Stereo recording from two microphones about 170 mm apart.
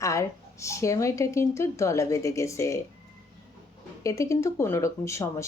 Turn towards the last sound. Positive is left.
turn(degrees=15)  # may be behind; listen again after turning